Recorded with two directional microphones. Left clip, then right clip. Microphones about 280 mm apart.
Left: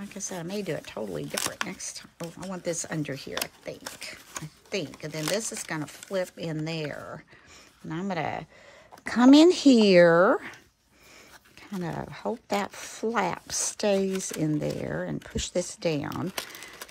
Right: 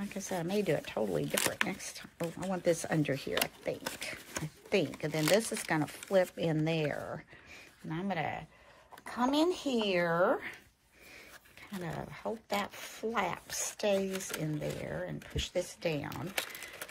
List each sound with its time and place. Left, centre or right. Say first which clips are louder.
0.3 s speech: right 1 dB; centre
9.0 s speech: left 12 dB; left
11.8 s speech: left 6 dB; centre